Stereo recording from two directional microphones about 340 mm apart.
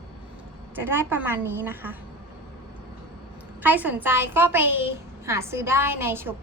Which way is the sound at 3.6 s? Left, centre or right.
Centre.